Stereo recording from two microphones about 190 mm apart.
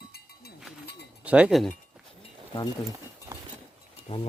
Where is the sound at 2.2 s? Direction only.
20° left (ahead or behind).